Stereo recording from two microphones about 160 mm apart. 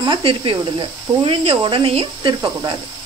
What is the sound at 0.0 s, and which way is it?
Speech, 30° right (ahead or behind).